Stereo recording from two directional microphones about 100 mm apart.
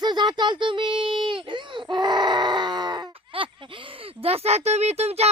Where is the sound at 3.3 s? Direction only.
60° right (ahead or behind); by 5.2 s 90° right.